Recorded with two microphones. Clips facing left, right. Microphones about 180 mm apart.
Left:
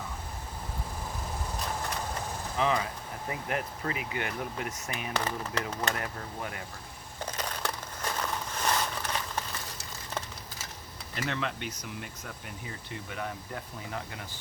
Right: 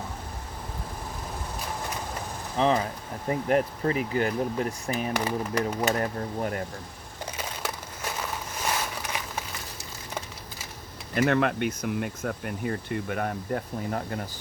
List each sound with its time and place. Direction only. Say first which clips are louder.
2.6 s speech: right 5 dB; 30° right (ahead or behind)
5.1 s speech: right 2 dB; 10° right (ahead or behind)
5.9 s speech: right 8 dB; 40° right (ahead or behind)
7.3 s crushing: right 1 dB; 10° right (ahead or behind)
11.1 s speech: right 11 dB; 55° right (ahead or behind)